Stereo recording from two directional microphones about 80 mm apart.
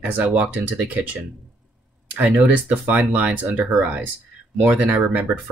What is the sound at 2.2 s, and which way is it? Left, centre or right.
Speech, centre.